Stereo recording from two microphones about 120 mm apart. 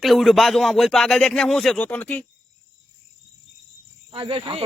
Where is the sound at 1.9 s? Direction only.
10° left (ahead or behind).